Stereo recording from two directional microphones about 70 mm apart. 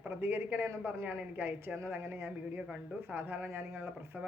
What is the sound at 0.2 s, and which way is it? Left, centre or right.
A woman's voice, right.